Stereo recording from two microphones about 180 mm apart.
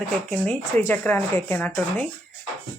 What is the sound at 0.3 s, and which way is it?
Speech, 10° left (ahead or behind).